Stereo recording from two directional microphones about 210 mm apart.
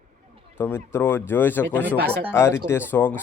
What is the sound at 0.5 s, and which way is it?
A man's voice, 10° left (ahead or behind).